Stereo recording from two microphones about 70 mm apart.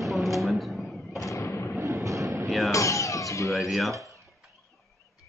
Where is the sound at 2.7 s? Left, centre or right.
Left.